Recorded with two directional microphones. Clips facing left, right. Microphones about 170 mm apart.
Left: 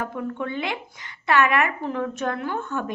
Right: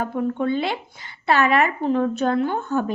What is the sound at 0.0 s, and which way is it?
A woman's voice, 30° right (ahead or behind).